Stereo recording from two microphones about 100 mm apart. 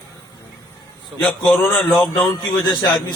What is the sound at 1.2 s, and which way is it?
A man's voice, 15° left (ahead or behind).